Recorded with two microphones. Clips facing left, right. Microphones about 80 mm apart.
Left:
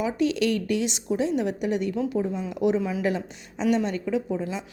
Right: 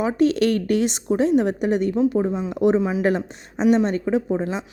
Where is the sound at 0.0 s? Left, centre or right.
Right.